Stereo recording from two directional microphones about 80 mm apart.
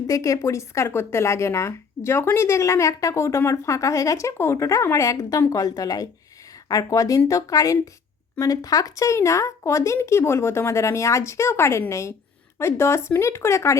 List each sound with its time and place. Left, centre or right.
0.1 s speech: left